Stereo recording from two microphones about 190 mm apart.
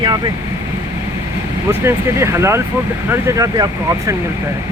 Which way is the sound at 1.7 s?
15° right (ahead or behind).